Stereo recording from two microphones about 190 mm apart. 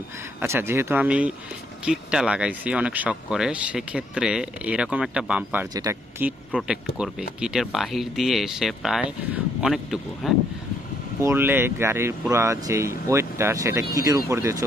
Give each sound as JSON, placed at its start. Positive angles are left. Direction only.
{"t": 0.3, "sound": "speech", "side_deg": -15}
{"t": 11.2, "sound": "speech", "side_deg": -15}